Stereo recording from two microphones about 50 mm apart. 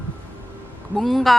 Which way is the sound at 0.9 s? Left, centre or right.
Centre.